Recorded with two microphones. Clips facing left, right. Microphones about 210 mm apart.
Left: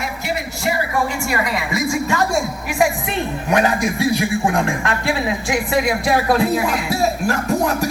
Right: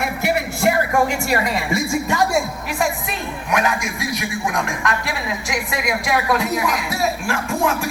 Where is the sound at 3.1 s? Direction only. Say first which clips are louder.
Left 4 dB; 35° left (ahead or behind).